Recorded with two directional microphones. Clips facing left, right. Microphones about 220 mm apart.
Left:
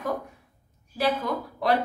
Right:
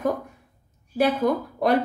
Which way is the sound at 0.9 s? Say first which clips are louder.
Right 5 dB; 50° right (ahead or behind).